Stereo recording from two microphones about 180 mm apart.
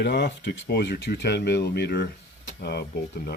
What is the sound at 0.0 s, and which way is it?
Speech, 70° left (ahead or behind).